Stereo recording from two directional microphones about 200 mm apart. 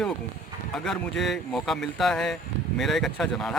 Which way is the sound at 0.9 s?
Centre (ahead or behind).